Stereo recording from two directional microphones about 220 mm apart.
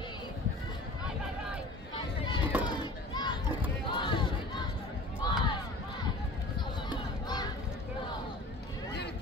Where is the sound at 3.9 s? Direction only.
20° left (ahead or behind).